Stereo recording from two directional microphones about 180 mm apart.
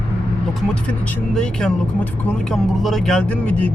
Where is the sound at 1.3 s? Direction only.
5° left (ahead or behind).